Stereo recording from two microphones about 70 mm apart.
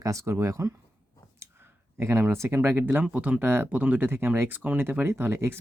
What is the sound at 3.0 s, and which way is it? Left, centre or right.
Speech, centre.